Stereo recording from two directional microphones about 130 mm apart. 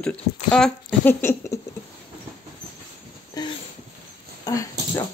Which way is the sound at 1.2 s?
25° left (ahead or behind).